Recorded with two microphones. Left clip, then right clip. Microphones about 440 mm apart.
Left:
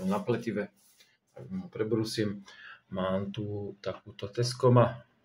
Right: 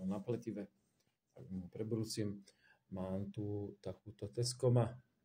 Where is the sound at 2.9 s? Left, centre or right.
Right.